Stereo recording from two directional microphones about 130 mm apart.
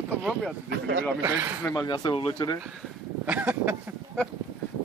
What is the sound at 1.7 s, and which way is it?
Speech, 35° left (ahead or behind).